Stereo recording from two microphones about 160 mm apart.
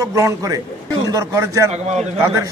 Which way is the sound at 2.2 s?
20° right (ahead or behind).